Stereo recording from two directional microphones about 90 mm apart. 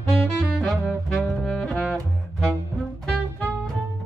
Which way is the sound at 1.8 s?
5° left (ahead or behind).